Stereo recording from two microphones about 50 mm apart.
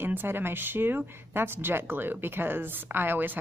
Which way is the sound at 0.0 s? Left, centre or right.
Right.